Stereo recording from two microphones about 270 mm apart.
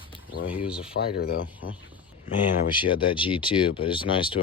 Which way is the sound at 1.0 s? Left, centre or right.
Left.